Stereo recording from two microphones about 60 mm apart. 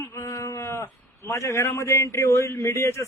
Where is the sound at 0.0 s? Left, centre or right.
Left.